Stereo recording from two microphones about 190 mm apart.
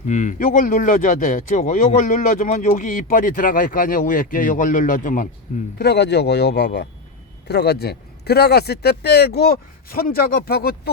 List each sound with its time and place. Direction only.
0.1 s speech: 40° left (ahead or behind)
5.8 s a man's voice: 60° left (ahead or behind)